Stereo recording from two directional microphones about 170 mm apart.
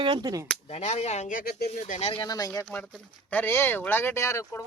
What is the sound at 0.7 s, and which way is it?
Speech, 40° left (ahead or behind).